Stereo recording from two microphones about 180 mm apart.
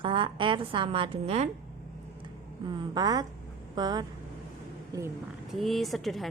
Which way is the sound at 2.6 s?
25° right (ahead or behind).